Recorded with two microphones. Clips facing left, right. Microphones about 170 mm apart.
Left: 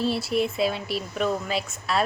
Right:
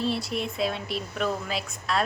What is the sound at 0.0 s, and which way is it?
Speech, 5° left (ahead or behind).